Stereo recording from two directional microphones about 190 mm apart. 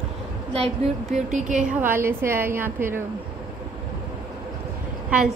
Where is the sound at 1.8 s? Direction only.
10° right (ahead or behind).